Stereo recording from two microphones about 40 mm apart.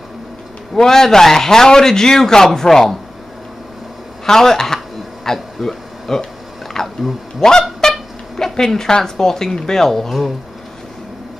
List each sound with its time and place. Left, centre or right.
0.7 s a man's voice: centre
4.3 s a man's voice: centre
5.2 s a sound: centre
7.3 s a man's voice: centre
7.8 s a sound: centre
8.5 s a man's voice: centre